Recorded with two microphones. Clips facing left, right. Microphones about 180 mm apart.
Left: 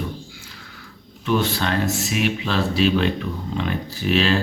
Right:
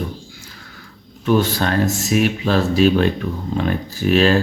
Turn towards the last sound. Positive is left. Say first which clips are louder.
# right 5 dB
turn(degrees=-45)  # may be behind; listen again after turning